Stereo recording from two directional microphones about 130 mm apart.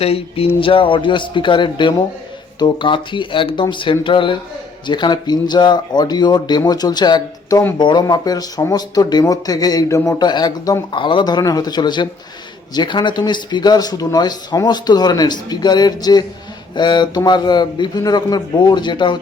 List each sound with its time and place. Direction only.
0.0 s speech: 50° left (ahead or behind)